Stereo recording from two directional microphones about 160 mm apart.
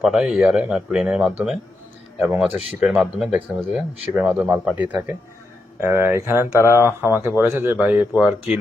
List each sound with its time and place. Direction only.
0.0 s speech: 5° right (ahead or behind)